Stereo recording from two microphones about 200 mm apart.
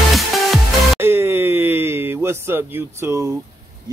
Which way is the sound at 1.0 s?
10° right (ahead or behind).